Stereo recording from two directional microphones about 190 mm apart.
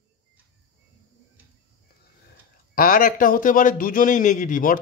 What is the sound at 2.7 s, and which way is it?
A man's voice, 50° left (ahead or behind).